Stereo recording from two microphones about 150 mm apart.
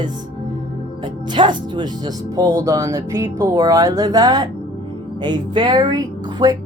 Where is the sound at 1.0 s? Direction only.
30° right (ahead or behind).